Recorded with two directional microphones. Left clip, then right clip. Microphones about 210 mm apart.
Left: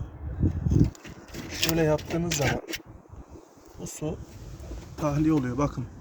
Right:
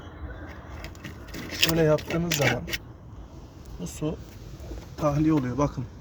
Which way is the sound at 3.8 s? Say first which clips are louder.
Right 2 dB; 5° right (ahead or behind).